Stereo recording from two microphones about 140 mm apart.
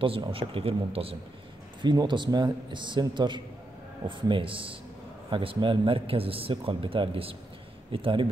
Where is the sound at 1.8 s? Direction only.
35° right (ahead or behind).